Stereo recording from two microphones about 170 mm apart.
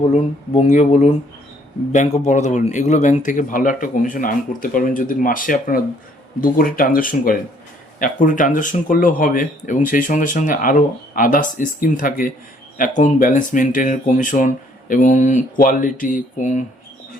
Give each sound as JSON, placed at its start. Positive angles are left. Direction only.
{"t": 0.1, "sound": "speech", "side_deg": 40}